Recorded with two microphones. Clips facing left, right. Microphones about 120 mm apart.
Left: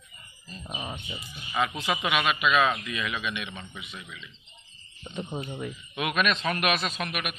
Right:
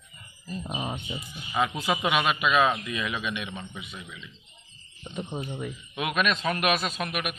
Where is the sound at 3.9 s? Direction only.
10° right (ahead or behind).